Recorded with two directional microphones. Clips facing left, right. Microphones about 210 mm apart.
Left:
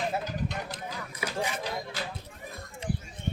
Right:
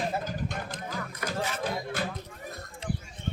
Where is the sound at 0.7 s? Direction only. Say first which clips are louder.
Right 2 dB; 10° left (ahead or behind).